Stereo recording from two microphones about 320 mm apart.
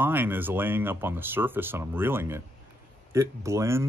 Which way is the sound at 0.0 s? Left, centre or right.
Centre.